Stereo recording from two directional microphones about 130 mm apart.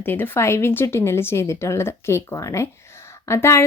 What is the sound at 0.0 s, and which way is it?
Speech, 15° left (ahead or behind).